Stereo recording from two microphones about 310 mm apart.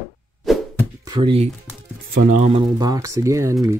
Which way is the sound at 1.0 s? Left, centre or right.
Centre.